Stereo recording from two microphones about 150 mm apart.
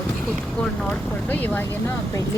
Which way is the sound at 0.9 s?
10° left (ahead or behind).